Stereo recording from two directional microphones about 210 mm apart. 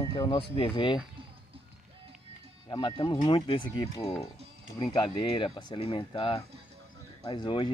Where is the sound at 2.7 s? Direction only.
25° left (ahead or behind).